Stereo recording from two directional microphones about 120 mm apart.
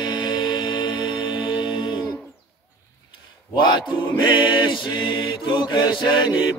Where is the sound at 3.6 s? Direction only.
40° left (ahead or behind).